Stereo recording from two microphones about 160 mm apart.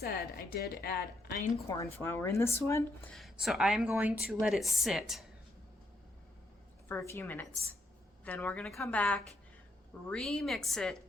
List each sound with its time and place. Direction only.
0.0 s a woman's voice: 75° left (ahead or behind)
1.6 s speech: 20° left (ahead or behind)
3.1 s a woman's voice: centre (ahead or behind)
6.8 s a woman's voice: 15° left (ahead or behind)